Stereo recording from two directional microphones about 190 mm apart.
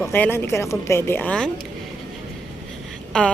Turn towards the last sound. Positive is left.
turn(degrees=5)  # may be behind; listen again after turning